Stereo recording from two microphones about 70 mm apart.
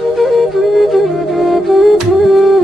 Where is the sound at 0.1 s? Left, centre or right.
Centre.